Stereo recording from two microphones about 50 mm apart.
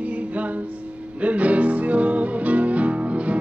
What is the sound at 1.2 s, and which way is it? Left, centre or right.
Music, right.